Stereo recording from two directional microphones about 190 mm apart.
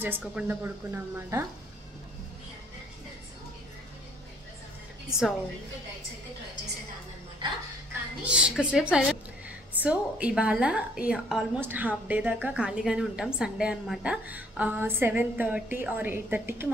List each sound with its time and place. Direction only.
0.0 s a woman's voice: 5° right (ahead or behind)
7.4 s music: 25° right (ahead or behind)
8.3 s a woman's voice: 5° right (ahead or behind)